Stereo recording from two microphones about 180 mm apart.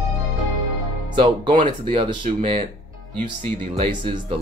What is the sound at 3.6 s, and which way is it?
Speech, 35° right (ahead or behind).